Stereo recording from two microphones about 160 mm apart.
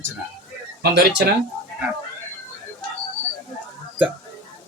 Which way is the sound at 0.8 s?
85° right.